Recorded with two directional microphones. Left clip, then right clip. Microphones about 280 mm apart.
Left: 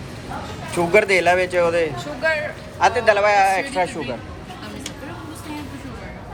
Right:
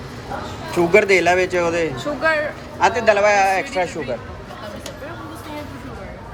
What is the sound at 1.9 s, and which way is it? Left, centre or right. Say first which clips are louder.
Speech: right 3 dB; right.